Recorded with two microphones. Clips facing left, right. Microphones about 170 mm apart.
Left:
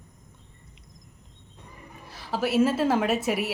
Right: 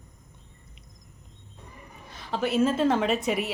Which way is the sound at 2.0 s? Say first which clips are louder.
Left 1 dB; 5° left (ahead or behind).